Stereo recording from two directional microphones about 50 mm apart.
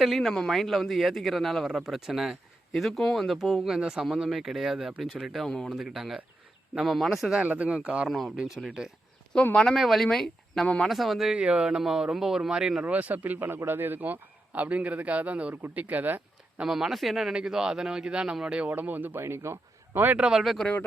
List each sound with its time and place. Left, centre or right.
0.0 s speech: centre
1.7 s speech: centre
3.3 s speech: centre
7.4 s a man's voice: right
8.0 s speech: centre
9.3 s speech: centre
9.7 s speech: centre
10.8 s speech: centre
11.3 s speech: centre
12.8 s a man's voice: right
16.6 s speech: centre
18.7 s a man's voice: right
19.2 s a man's voice: right
20.2 s speech: right